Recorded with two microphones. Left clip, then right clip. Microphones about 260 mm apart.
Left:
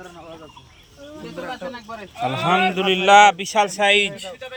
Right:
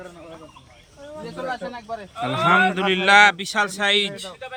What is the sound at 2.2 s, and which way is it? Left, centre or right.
Speech, centre.